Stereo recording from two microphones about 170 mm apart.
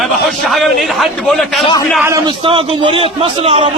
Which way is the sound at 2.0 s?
15° right (ahead or behind).